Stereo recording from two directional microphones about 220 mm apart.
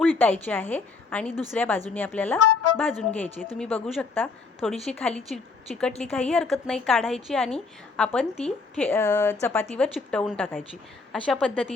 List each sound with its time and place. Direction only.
0.0 s a woman's voice: 5° left (ahead or behind)
2.4 s music: 90° left
3.0 s a woman's voice: 5° left (ahead or behind)